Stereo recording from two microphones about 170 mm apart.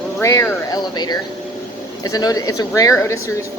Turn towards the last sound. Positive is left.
turn(degrees=20)  # may be behind; listen again after turning